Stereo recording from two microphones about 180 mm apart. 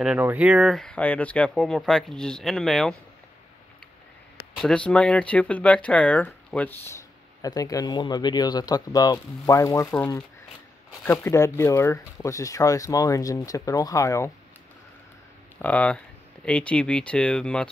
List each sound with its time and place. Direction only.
0.0 s speech: 10° right (ahead or behind)
4.6 s speech: 5° left (ahead or behind)
15.6 s speech: 10° left (ahead or behind)